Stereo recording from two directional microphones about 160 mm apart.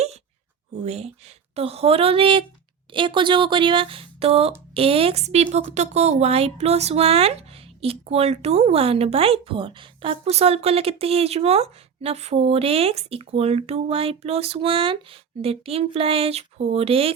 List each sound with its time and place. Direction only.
0.9 s a woman's voice: 40° right (ahead or behind)